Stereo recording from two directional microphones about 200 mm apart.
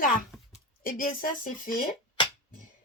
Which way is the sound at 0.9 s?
45° left (ahead or behind).